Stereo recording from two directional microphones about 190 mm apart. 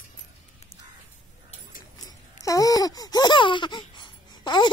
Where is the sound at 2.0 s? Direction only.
20° left (ahead or behind).